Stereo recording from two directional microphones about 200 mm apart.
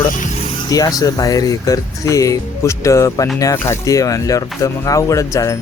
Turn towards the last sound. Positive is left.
turn(degrees=15)  # may be behind; listen again after turning